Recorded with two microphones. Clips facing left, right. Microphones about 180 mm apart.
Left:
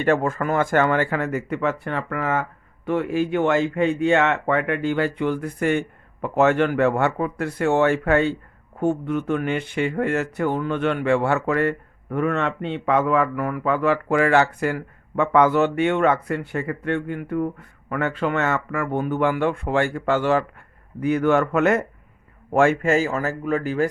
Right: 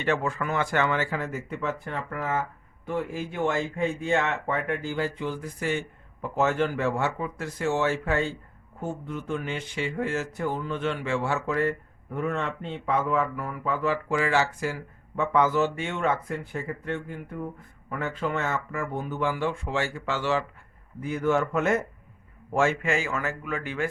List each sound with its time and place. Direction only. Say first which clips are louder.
0.0 s speech: left 6 dB; 50° left (ahead or behind)
6.2 s speech: left 6 dB; 70° left (ahead or behind); by 20.4 s 50° left (ahead or behind)
21.0 s speech: left 6 dB; 70° left (ahead or behind)
22.5 s speech: left 7 dB; 55° left (ahead or behind)